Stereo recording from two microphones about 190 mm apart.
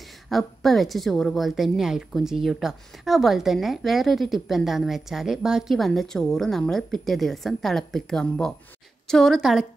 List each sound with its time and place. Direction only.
0.3 s a woman's voice: centre (ahead or behind)